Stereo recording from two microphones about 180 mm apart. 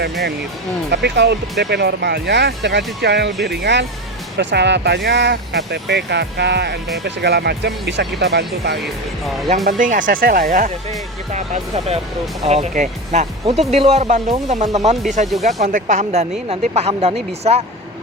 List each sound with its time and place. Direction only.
0.9 s speech: 70° right (ahead or behind)
9.6 s speech: 45° right (ahead or behind)